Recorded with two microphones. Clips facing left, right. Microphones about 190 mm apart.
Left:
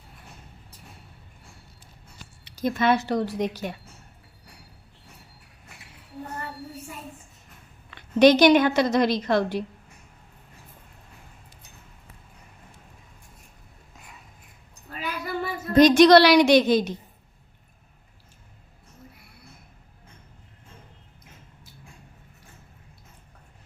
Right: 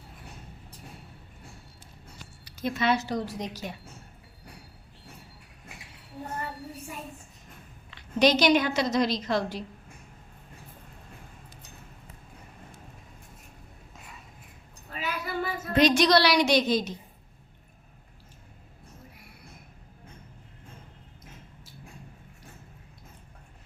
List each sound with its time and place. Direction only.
2.6 s a woman's voice: 45° left (ahead or behind)
7.9 s a woman's voice: 55° left (ahead or behind)
14.8 s child singing: centre (ahead or behind)
15.7 s a woman's voice: 45° left (ahead or behind)